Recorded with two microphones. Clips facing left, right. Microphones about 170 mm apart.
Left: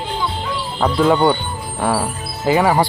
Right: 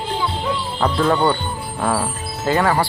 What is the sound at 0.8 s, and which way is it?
Speech, 10° left (ahead or behind).